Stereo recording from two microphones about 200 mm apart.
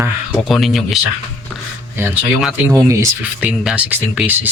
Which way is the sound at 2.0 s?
10° right (ahead or behind).